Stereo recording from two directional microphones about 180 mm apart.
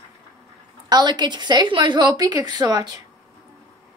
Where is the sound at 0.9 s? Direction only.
25° right (ahead or behind).